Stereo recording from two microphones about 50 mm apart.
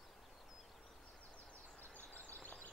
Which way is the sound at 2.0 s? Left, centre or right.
Left.